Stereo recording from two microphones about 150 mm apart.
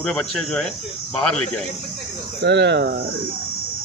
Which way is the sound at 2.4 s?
90° right.